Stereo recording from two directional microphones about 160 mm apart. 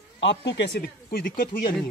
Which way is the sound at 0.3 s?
90° left.